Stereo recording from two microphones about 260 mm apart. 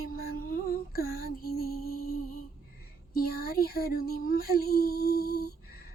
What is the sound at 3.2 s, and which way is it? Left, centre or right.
Child singing, left.